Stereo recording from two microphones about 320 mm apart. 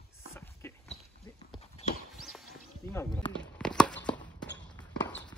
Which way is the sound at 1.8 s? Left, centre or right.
Centre.